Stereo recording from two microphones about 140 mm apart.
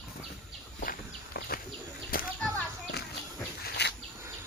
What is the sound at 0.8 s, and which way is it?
Walk, 90° left.